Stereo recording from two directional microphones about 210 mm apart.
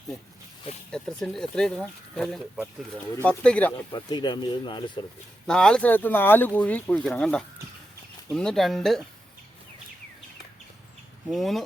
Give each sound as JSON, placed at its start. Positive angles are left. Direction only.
{"t": 0.9, "sound": "speech", "side_deg": 5}
{"t": 3.9, "sound": "speech", "side_deg": 20}
{"t": 5.5, "sound": "speech", "side_deg": 5}
{"t": 11.3, "sound": "speech", "side_deg": 0}